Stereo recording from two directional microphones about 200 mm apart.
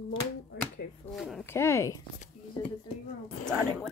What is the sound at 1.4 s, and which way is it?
Speech, 15° left (ahead or behind).